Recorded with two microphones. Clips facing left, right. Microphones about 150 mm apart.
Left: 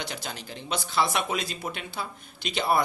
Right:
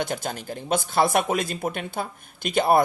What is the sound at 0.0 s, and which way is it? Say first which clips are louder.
Speech: right 8 dB; 50° right (ahead or behind).